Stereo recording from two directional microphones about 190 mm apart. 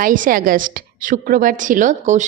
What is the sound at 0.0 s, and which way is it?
A woman's voice, 45° right (ahead or behind).